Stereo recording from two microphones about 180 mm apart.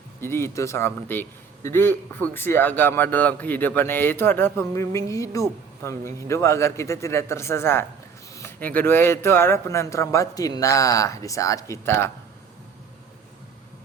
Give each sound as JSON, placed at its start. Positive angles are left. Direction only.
{"t": 0.2, "sound": "a man's voice", "side_deg": 15}